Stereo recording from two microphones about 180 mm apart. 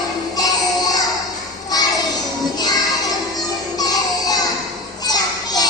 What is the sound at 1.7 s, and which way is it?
Child singing, 20° left (ahead or behind).